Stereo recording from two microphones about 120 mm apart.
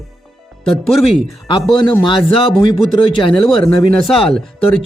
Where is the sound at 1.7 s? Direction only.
40° left (ahead or behind).